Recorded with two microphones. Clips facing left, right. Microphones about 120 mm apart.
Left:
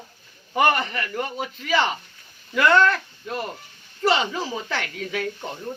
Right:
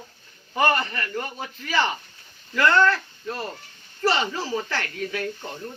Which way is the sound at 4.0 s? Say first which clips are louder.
Left 2 dB; 15° left (ahead or behind).